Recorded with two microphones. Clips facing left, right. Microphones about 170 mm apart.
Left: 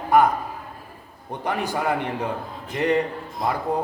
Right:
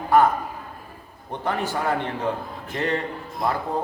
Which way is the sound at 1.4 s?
15° left (ahead or behind).